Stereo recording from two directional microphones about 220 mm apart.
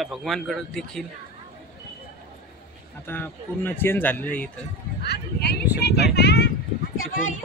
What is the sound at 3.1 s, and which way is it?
Speech, 10° left (ahead or behind).